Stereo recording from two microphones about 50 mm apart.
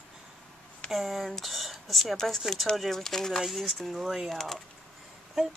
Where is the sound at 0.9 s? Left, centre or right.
Centre.